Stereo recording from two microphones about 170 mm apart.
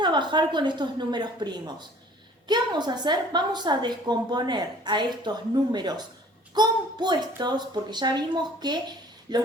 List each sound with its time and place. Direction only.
0.0 s a woman's voice: 25° right (ahead or behind)